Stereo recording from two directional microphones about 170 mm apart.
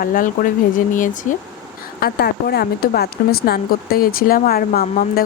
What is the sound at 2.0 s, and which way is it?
Speech, 70° left (ahead or behind).